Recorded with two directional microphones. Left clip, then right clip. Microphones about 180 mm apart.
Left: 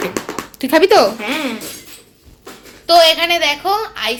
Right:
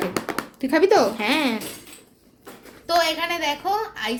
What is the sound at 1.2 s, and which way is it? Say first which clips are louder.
Speech: left 1 dB; 40° right (ahead or behind).